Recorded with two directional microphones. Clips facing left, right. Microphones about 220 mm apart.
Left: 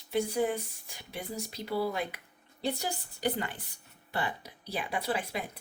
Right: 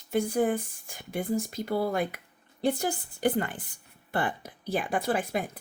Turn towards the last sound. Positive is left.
turn(degrees=-50)  # may be behind; listen again after turning